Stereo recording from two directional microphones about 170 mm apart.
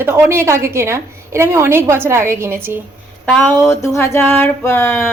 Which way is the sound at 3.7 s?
15° left (ahead or behind).